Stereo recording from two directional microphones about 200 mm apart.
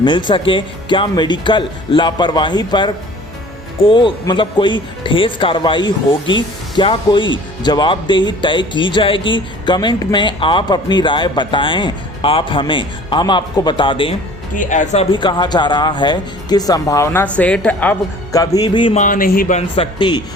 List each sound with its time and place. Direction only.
0.0 s speech: 25° left (ahead or behind)
14.5 s speech: 40° left (ahead or behind)
15.1 s speech: 25° left (ahead or behind)
18.9 s speech: 40° left (ahead or behind)
19.7 s speech: 25° left (ahead or behind)